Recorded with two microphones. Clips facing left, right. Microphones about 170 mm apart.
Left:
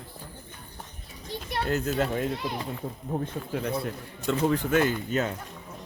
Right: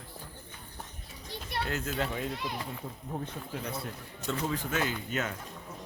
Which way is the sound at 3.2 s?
60° left (ahead or behind).